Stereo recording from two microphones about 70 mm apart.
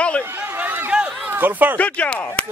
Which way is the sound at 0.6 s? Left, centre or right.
Right.